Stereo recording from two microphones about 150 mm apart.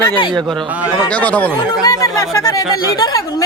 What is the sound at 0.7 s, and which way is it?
Speech, 10° right (ahead or behind).